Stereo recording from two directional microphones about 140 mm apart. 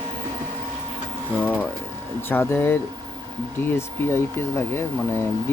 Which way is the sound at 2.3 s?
15° left (ahead or behind).